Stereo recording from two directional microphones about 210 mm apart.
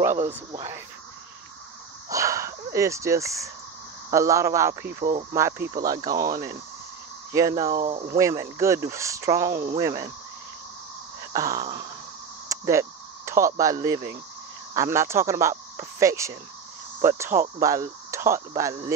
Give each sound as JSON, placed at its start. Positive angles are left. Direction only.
{"t": 0.5, "sound": "speech", "side_deg": -15}
{"t": 2.0, "sound": "speech", "side_deg": -15}
{"t": 4.8, "sound": "speech", "side_deg": -40}
{"t": 5.3, "sound": "speech", "side_deg": -10}
{"t": 7.7, "sound": "speech", "side_deg": -40}
{"t": 8.2, "sound": "speech", "side_deg": -15}
{"t": 11.3, "sound": "speech", "side_deg": -15}